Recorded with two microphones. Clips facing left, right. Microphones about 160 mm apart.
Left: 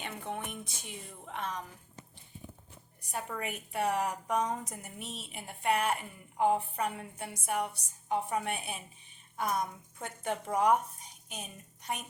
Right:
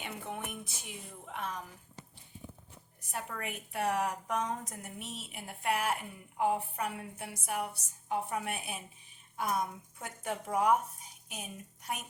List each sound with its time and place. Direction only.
0.0 s speech: 10° right (ahead or behind)
3.1 s a woman's voice: centre (ahead or behind)